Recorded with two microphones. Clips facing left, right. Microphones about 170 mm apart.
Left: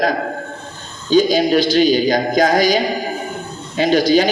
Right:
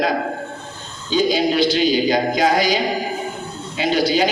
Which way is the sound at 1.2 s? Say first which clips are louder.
Left 2 dB; 40° left (ahead or behind).